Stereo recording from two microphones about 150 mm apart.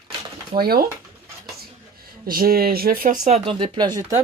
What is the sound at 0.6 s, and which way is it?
Speech, 90° right.